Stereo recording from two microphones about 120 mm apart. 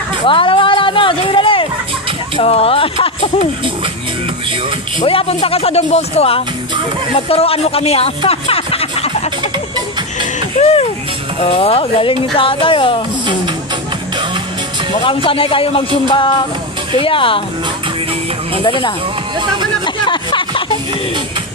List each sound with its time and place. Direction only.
0.3 s a sound: 45° left (ahead or behind)
2.4 s speech: 55° left (ahead or behind)
5.0 s speech: 50° left (ahead or behind)
10.6 s music: 60° left (ahead or behind)
11.3 s speech: 55° left (ahead or behind)
15.0 s speech: 50° left (ahead or behind)
18.6 s speech: 45° left (ahead or behind)
19.8 s music: 40° left (ahead or behind)